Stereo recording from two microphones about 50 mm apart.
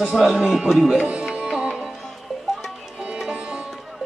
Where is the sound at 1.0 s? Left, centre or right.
Centre.